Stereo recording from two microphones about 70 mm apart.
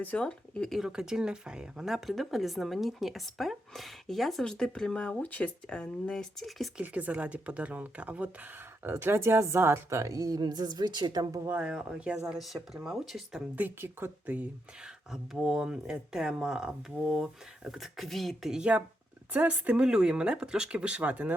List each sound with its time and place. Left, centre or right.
0.0 s speech: centre
0.7 s speech: centre; by 5.5 s left
5.6 s speech: centre
6.8 s speech: right
8.8 s a woman's voice: right
11.6 s speech: centre
12.3 s speech: centre
13.6 s speech: right
15.1 s speech: centre
18.5 s speech: centre